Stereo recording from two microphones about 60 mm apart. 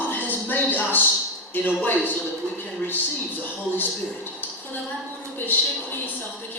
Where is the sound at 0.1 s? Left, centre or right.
Left.